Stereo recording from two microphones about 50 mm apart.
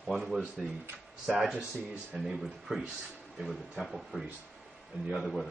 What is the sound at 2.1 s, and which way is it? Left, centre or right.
Speech, centre.